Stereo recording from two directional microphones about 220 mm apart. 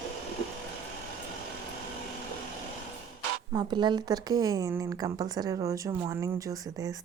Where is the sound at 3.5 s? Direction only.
20° right (ahead or behind).